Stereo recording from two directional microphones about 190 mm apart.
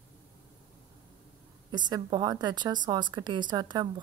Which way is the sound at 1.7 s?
25° right (ahead or behind).